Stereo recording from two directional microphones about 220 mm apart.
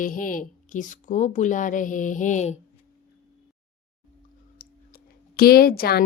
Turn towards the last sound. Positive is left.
turn(degrees=45)  # may be behind; listen again after turning